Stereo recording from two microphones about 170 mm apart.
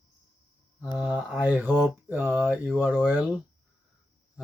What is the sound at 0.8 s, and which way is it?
Mantra, 5° right (ahead or behind).